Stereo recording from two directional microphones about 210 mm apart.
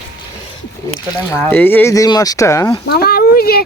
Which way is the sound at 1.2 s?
10° left (ahead or behind).